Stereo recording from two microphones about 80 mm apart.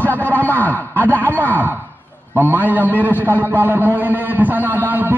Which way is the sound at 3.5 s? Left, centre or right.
Right.